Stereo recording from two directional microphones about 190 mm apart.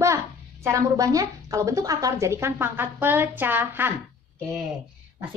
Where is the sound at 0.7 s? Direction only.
20° right (ahead or behind); by 4.6 s centre (ahead or behind).